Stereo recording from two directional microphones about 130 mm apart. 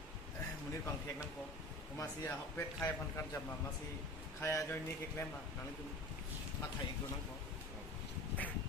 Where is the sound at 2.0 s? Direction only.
20° left (ahead or behind).